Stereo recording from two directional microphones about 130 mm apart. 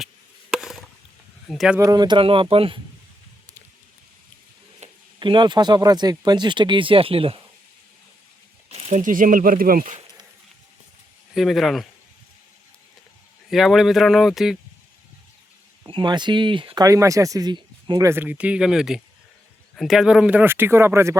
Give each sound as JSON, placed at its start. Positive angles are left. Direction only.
{"t": 0.5, "sound": "chop", "side_deg": 0}
{"t": 1.5, "sound": "speech", "side_deg": 0}
{"t": 1.8, "sound": "speech", "side_deg": -30}
{"t": 4.8, "sound": "a sound", "side_deg": -60}
{"t": 5.2, "sound": "speech", "side_deg": -40}
{"t": 8.7, "sound": "speech", "side_deg": -60}
{"t": 11.3, "sound": "speech", "side_deg": 0}
{"t": 13.5, "sound": "speech", "side_deg": 0}
{"t": 15.9, "sound": "speech", "side_deg": -35}
{"t": 16.8, "sound": "speech", "side_deg": -25}